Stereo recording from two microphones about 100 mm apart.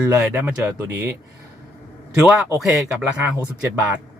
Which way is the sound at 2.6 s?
5° right (ahead or behind).